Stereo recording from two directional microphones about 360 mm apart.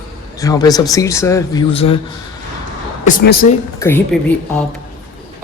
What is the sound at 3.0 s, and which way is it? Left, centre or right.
Speech, left.